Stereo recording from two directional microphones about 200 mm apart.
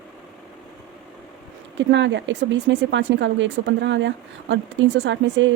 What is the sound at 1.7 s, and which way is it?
Speech, 65° right (ahead or behind).